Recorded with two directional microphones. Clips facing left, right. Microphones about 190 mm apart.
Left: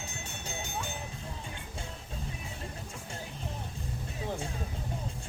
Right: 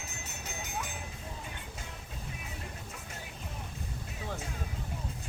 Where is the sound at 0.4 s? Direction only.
30° left (ahead or behind).